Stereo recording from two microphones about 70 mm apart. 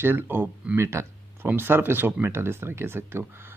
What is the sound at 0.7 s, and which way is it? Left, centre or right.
Speech, right.